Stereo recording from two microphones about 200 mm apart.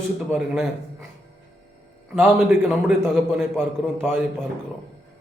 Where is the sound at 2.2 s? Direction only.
5° right (ahead or behind).